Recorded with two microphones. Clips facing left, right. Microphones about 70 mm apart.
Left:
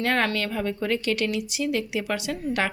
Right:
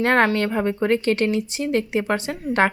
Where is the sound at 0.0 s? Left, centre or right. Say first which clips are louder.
Right 6 dB; right.